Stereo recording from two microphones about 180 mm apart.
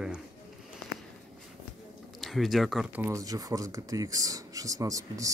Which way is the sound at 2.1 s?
Centre (ahead or behind).